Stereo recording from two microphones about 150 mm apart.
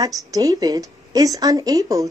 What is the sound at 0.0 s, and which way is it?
A woman's voice, 25° right (ahead or behind).